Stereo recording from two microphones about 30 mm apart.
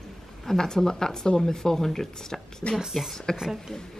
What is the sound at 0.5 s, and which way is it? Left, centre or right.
Speech, centre.